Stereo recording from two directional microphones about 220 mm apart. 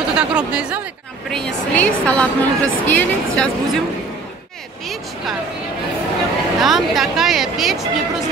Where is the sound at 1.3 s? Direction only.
5° left (ahead or behind).